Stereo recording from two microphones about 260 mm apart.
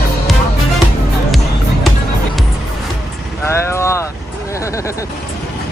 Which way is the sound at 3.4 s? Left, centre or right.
Centre.